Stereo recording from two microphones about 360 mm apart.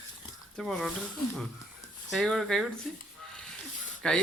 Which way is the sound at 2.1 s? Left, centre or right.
Centre.